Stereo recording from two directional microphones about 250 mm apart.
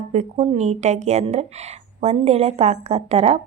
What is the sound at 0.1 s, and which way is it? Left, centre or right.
Speech, right.